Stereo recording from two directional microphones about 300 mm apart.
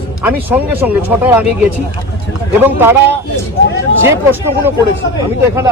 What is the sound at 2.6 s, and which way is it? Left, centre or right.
A man's voice, centre.